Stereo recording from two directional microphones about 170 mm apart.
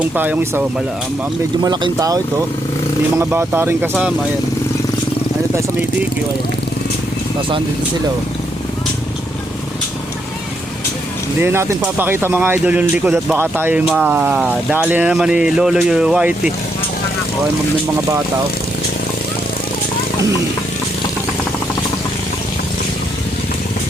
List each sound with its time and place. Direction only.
0.0 s speech: 10° right (ahead or behind)
1.6 s speech: 25° right (ahead or behind)
11.3 s speech: 15° right (ahead or behind)